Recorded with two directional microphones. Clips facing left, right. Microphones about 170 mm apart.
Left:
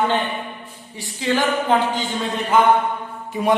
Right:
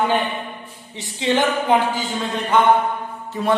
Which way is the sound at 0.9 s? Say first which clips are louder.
Right 2 dB; 20° right (ahead or behind).